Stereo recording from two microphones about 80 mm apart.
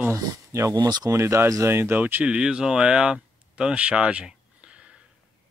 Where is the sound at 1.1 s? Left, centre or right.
Right; by 4.8 s centre.